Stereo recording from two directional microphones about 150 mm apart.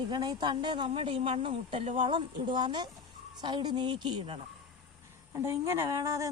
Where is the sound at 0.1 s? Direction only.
30° right (ahead or behind).